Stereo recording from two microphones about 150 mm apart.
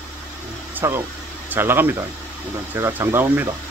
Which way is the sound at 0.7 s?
15° right (ahead or behind).